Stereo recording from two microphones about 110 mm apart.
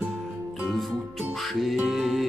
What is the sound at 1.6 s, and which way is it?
Music, centre (ahead or behind).